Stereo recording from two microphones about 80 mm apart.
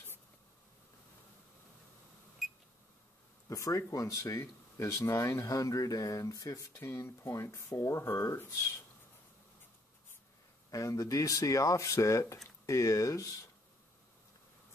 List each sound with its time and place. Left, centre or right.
2.4 s a sound: centre
3.4 s speech: left
6.8 s speech: left
10.7 s speech: left